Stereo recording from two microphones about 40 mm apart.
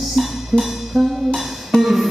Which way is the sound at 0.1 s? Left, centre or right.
Centre.